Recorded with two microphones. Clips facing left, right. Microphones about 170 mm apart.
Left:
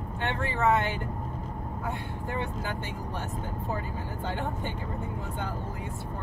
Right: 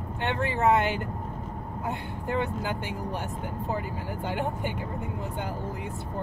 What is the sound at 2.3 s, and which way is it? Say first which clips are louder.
Speech: right 5 dB; 20° right (ahead or behind).